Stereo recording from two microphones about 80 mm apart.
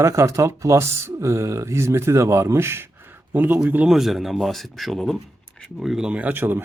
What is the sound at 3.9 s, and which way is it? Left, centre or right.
Speech, centre.